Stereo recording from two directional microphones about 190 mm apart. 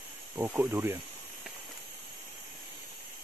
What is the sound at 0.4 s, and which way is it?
Speech, 10° right (ahead or behind).